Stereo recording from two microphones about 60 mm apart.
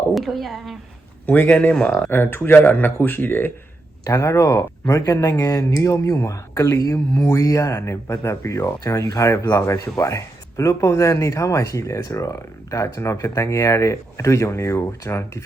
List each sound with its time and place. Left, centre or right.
0.1 s a woman's voice: centre
1.3 s speech: left
1.7 s speech: centre
2.0 s speech: left
4.0 s speech: left